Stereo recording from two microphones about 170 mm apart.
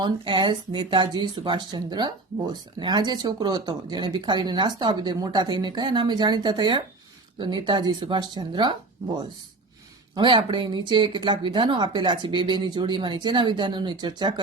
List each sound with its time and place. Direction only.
0.0 s speech: 30° right (ahead or behind)
10.2 s speech: 25° right (ahead or behind)